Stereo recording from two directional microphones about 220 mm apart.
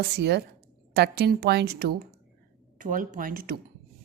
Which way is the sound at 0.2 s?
50° right (ahead or behind).